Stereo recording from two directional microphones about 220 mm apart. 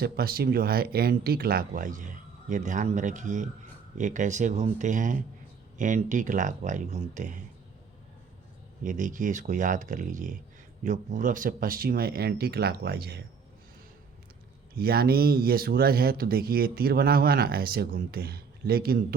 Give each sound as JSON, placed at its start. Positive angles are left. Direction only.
{"t": 0.0, "sound": "speech", "side_deg": -45}
{"t": 8.8, "sound": "speech", "side_deg": -35}
{"t": 14.8, "sound": "speech", "side_deg": -45}